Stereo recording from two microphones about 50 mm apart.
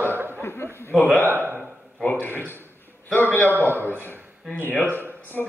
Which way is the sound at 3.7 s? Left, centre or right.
Right.